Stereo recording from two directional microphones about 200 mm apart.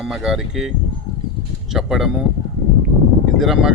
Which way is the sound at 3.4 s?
Centre (ahead or behind).